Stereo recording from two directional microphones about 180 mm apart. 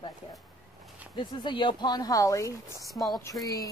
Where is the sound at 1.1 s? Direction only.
25° left (ahead or behind).